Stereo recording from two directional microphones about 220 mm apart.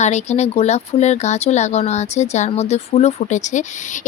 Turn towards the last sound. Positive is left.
turn(degrees=35)  # may be behind; listen again after turning